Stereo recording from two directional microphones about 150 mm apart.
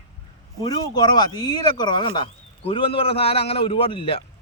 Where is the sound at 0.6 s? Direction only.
30° left (ahead or behind).